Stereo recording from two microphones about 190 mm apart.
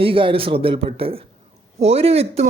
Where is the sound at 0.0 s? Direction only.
30° right (ahead or behind).